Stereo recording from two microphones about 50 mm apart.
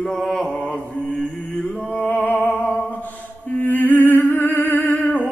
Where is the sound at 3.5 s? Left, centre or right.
Left.